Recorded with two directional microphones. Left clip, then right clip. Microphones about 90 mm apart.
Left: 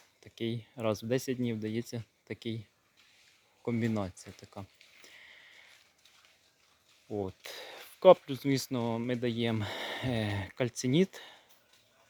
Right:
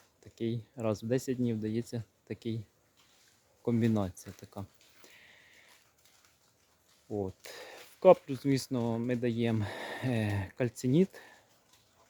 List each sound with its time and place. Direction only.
0.2 s speech: 25° right (ahead or behind)
3.7 s speech: 40° right (ahead or behind)
5.0 s a sound: 30° right (ahead or behind)
7.4 s speech: 20° right (ahead or behind)